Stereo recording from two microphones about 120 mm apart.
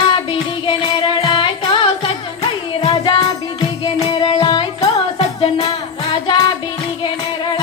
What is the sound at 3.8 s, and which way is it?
Music, 35° left (ahead or behind).